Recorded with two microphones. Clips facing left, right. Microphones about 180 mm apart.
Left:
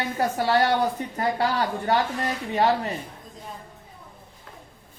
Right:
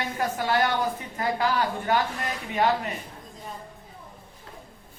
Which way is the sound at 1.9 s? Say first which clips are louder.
Left 2 dB; 35° left (ahead or behind).